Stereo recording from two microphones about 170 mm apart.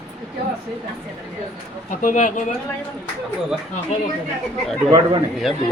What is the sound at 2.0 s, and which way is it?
Speech, 50° left (ahead or behind).